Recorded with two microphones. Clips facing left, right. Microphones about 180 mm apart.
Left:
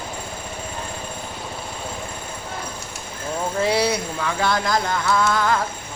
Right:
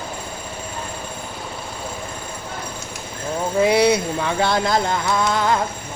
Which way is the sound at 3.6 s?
20° right (ahead or behind).